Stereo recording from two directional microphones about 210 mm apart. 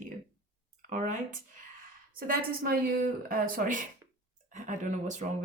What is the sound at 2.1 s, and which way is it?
Speech, 45° right (ahead or behind).